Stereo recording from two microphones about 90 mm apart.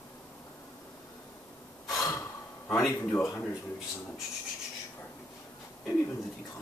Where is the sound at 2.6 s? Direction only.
5° left (ahead or behind).